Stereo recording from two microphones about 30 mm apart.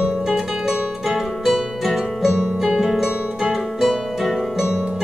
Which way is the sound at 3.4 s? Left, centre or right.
Centre.